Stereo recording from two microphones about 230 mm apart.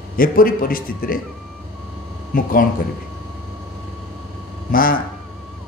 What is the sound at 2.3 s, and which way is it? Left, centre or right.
Speech, left.